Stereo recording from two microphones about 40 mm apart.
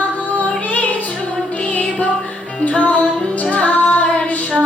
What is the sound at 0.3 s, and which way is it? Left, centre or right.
Music, left.